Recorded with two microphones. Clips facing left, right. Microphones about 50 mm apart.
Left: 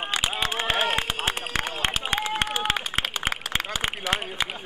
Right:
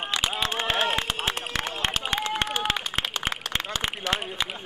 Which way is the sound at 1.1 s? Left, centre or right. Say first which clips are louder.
Left 1 dB; centre.